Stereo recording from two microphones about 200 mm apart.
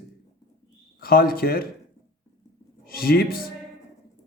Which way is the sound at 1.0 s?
50° left (ahead or behind).